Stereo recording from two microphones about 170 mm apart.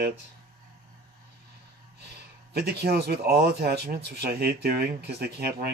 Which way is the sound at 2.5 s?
70° right (ahead or behind).